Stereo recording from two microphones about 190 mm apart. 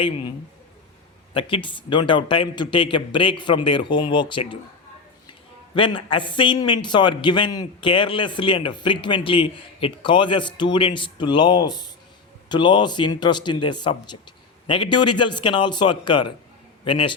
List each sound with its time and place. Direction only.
1.3 s a man's voice: 25° left (ahead or behind)
5.7 s a man's voice: 25° left (ahead or behind)